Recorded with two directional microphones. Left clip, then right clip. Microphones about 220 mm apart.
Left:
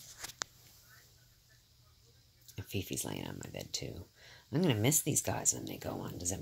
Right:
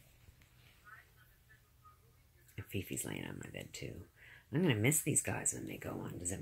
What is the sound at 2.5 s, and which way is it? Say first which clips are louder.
Speech: left 3 dB; 10° left (ahead or behind).